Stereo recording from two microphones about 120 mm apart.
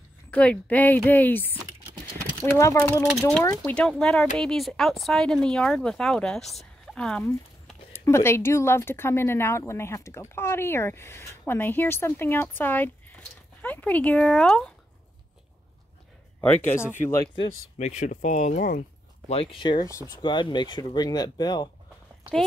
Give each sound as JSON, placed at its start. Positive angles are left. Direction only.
{"t": 0.3, "sound": "speech", "side_deg": 10}
{"t": 2.5, "sound": "a woman's voice", "side_deg": 25}
{"t": 3.6, "sound": "speech", "side_deg": 5}
{"t": 6.5, "sound": "a sound", "side_deg": 0}
{"t": 7.9, "sound": "a woman's voice", "side_deg": 25}
{"t": 16.3, "sound": "speech", "side_deg": 20}
{"t": 17.7, "sound": "speech", "side_deg": 85}
{"t": 19.3, "sound": "speech", "side_deg": 45}